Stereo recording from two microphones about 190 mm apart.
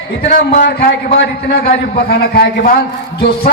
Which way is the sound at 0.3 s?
50° left (ahead or behind).